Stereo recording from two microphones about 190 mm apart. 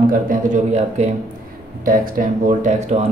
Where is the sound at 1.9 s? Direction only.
45° right (ahead or behind).